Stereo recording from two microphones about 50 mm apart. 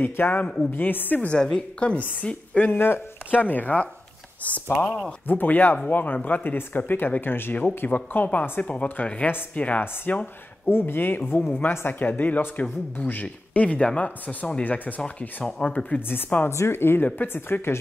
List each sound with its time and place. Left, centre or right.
0.0 s speech: left
1.3 s a woman's voice: centre
2.7 s speech: left
3.3 s speech: left
4.7 s a woman's voice: centre
5.2 s a woman's voice: left
10.7 s speech: left
15.0 s speech: centre
16.1 s speech: left
16.4 s speech: left